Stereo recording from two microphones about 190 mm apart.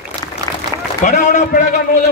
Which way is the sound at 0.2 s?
20° left (ahead or behind).